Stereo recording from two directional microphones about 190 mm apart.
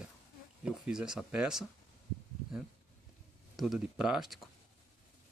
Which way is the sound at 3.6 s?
Centre (ahead or behind).